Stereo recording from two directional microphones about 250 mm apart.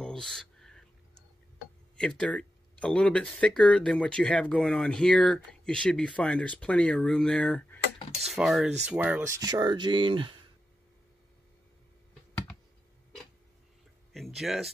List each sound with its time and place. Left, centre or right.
0.0 s a sound: centre
2.0 s speech: centre
14.1 s speech: centre